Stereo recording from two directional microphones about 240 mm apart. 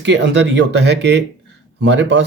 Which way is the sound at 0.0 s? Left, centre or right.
Right.